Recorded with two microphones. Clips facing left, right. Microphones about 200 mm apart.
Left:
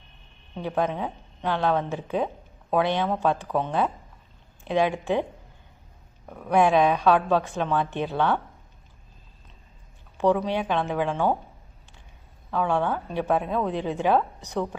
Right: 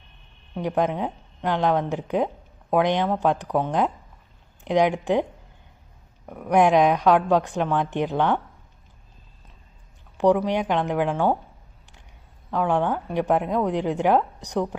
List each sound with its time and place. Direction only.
0.5 s a woman's voice: 15° right (ahead or behind)
6.2 s a woman's voice: 10° right (ahead or behind)
10.2 s a woman's voice: 15° right (ahead or behind)
12.5 s a woman's voice: 15° right (ahead or behind)